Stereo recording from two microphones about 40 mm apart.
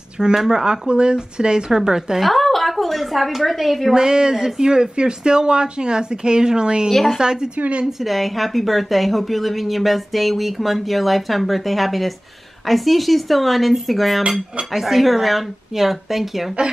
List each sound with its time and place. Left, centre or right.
0.2 s speech: centre
2.1 s a woman's voice: centre
3.9 s speech: centre
7.5 s speech: right
7.8 s a woman's voice: centre